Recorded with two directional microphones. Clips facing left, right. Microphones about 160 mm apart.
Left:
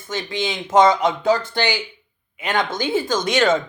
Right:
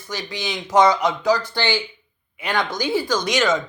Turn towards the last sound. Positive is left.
turn(degrees=30)  # may be behind; listen again after turning